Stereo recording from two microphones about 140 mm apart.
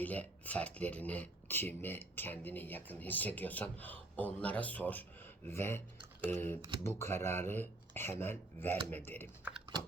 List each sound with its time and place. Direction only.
0.0 s speech: 10° left (ahead or behind)
9.4 s typing: 5° right (ahead or behind)